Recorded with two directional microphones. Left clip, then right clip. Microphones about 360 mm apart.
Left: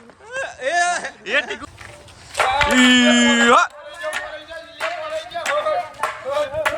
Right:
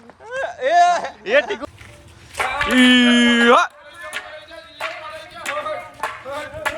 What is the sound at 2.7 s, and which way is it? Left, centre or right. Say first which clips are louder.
Speech: right 2 dB; centre.